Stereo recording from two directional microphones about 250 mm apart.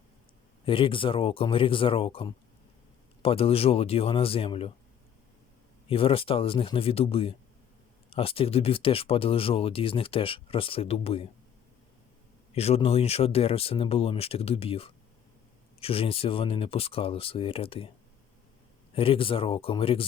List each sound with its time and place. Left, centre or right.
0.6 s speech: left
5.9 s speech: left
12.5 s speech: left
18.9 s speech: left